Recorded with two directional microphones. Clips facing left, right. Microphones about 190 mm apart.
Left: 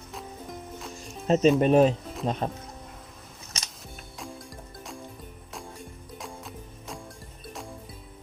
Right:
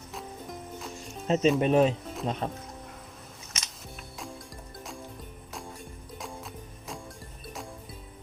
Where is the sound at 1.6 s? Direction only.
40° left (ahead or behind).